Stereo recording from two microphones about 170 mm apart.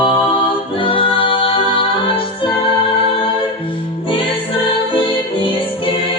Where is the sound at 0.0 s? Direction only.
30° left (ahead or behind).